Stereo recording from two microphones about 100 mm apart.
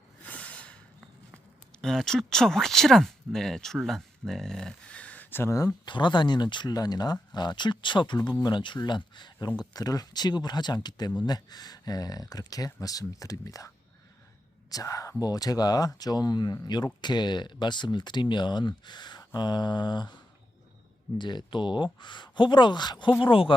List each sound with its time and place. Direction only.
0.2 s snort: 15° left (ahead or behind)
1.8 s speech: 5° left (ahead or behind); by 5.7 s 30° left (ahead or behind)
5.8 s speech: 50° left (ahead or behind); by 13.7 s 35° left (ahead or behind)
14.7 s speech: 35° left (ahead or behind)
21.2 s speech: 50° left (ahead or behind)
23.2 s speech: 60° left (ahead or behind)